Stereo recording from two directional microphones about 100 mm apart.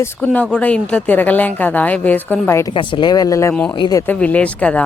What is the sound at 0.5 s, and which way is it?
A woman's voice, 10° left (ahead or behind).